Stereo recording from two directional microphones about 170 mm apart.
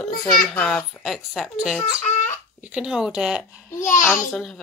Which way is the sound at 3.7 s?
50° left (ahead or behind).